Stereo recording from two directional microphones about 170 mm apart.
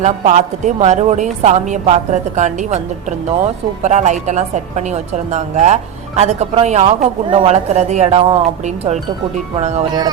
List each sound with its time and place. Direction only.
0.0 s a woman's voice: 45° right (ahead or behind)